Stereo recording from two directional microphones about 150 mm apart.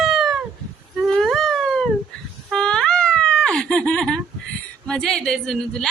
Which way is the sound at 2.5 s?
5° left (ahead or behind).